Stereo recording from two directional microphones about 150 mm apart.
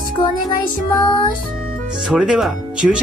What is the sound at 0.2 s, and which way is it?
Music, 35° left (ahead or behind).